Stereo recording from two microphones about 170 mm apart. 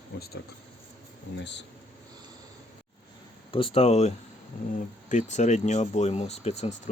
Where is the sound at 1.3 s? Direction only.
90° left.